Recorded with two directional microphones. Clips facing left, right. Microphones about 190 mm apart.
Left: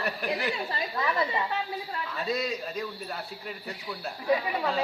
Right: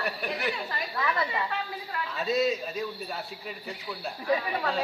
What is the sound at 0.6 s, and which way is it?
Speech, 25° left (ahead or behind).